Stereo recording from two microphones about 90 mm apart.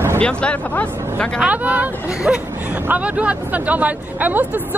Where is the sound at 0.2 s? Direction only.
15° left (ahead or behind).